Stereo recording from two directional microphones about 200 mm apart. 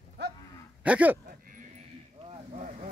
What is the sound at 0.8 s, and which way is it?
Speech, 5° right (ahead or behind).